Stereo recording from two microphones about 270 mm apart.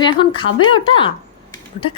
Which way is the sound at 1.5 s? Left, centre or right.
Centre.